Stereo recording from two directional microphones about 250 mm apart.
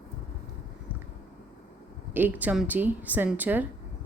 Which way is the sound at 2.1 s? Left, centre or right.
Centre.